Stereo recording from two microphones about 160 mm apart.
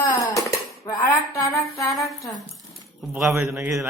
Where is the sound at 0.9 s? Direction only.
20° left (ahead or behind).